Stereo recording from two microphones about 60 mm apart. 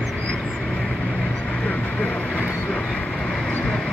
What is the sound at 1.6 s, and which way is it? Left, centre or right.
Vehicle, centre.